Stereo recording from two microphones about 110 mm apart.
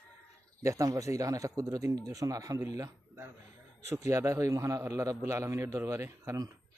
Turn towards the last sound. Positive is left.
turn(degrees=-30)  # may be behind; listen again after turning